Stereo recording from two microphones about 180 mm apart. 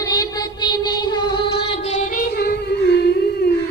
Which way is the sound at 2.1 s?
55° left (ahead or behind).